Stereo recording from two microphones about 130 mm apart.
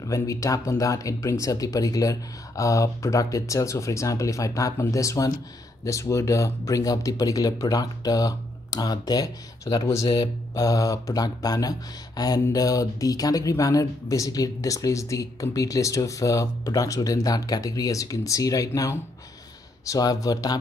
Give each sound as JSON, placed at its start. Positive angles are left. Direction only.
{"t": 0.0, "sound": "speech", "side_deg": 25}